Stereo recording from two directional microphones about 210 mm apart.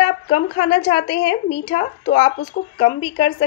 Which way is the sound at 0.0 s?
35° left (ahead or behind).